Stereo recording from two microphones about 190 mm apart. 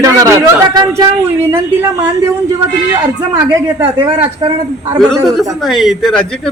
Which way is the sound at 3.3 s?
20° right (ahead or behind).